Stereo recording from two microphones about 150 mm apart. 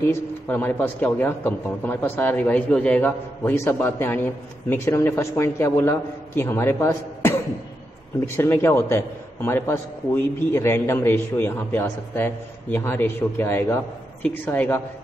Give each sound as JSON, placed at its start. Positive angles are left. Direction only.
{"t": 0.0, "sound": "a man's voice", "side_deg": 15}